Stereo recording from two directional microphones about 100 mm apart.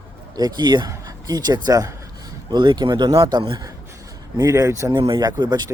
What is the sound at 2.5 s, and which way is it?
Speech, 50° right (ahead or behind).